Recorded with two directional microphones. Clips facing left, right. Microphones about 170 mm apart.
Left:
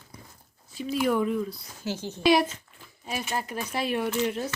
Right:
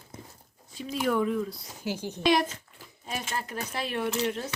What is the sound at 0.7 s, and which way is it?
Speech, centre (ahead or behind).